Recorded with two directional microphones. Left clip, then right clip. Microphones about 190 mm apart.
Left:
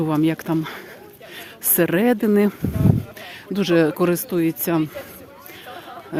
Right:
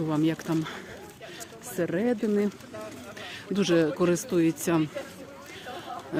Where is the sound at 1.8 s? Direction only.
55° left (ahead or behind).